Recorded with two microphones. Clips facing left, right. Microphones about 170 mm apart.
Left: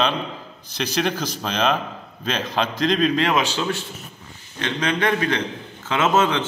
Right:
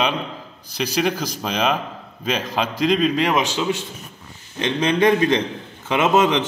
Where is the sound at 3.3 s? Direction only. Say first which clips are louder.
Right 1 dB; 15° right (ahead or behind).